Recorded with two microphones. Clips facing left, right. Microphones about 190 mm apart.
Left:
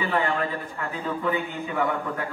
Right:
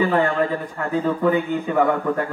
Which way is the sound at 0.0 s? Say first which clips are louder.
Right 6 dB; 50° right (ahead or behind).